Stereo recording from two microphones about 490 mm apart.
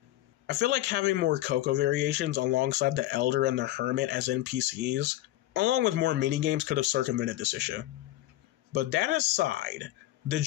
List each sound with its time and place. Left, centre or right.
0.5 s speech: right